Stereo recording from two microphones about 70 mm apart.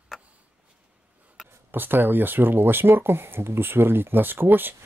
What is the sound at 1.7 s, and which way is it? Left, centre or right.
Speech, right.